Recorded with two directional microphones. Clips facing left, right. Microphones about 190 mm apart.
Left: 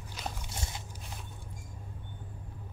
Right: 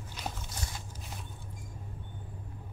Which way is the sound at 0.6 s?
25° left (ahead or behind).